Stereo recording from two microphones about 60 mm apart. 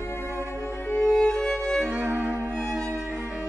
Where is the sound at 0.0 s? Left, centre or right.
Left.